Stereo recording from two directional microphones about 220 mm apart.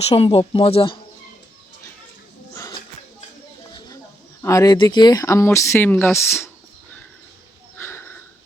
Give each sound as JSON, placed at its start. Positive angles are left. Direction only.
{"t": 0.0, "sound": "speech", "side_deg": 25}
{"t": 2.6, "sound": "music", "side_deg": 15}
{"t": 4.4, "sound": "speech", "side_deg": 15}
{"t": 7.8, "sound": "sniff", "side_deg": 10}